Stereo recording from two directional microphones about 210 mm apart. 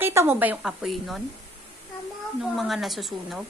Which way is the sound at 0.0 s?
10° right (ahead or behind).